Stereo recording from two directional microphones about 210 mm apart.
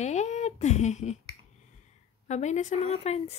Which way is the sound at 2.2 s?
35° left (ahead or behind).